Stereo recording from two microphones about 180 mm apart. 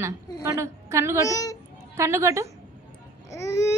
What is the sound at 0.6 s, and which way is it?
Speech, 15° right (ahead or behind).